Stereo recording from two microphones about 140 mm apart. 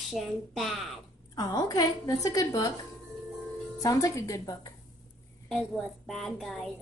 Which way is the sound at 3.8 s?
25° left (ahead or behind).